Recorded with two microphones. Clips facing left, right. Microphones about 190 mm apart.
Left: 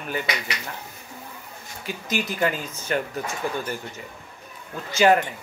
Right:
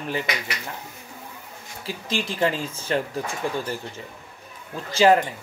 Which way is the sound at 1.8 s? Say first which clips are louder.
Even; 30° right (ahead or behind).